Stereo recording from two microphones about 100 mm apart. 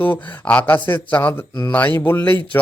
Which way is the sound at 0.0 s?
15° left (ahead or behind).